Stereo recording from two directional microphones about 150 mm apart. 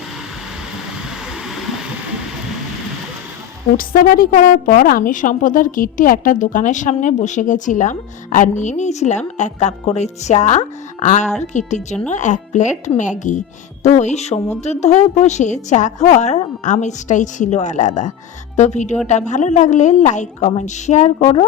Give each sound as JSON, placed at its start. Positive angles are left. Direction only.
{"t": 1.5, "sound": "vehicle", "side_deg": 0}
{"t": 3.8, "sound": "a woman's voice", "side_deg": 70}